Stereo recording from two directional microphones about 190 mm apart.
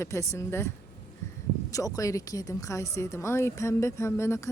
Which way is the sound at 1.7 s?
15° left (ahead or behind).